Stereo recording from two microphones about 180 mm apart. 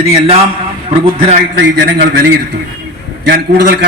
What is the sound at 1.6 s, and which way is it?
A man's voice, 65° right (ahead or behind).